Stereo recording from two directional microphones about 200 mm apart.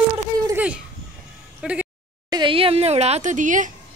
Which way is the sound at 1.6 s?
5° right (ahead or behind).